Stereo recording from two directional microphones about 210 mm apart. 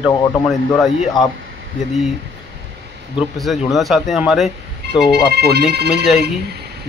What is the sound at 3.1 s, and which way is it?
Speech, centre (ahead or behind).